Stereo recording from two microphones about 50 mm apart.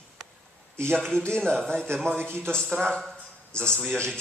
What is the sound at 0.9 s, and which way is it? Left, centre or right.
Speech, centre.